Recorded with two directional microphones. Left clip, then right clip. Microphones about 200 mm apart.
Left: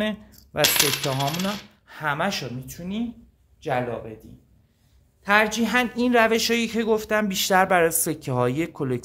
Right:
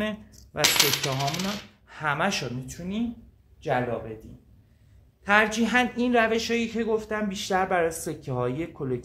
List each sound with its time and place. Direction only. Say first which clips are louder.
0.0 s coin: left 3 dB; 30° left (ahead or behind)
5.2 s a man's voice: left 2 dB; 25° left (ahead or behind); by 9.0 s 50° left (ahead or behind)